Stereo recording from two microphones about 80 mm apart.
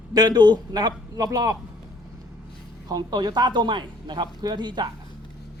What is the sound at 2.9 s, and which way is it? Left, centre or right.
A man's voice, right.